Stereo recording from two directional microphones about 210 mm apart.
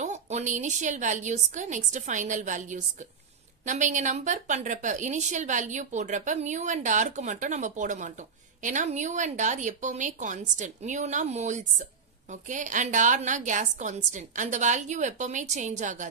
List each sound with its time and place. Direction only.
0.0 s a woman's voice: 30° right (ahead or behind)